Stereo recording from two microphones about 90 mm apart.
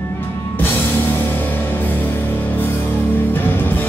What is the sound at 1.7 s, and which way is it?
Music, 20° left (ahead or behind).